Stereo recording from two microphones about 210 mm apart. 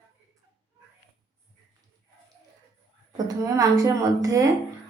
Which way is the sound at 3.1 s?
15° right (ahead or behind).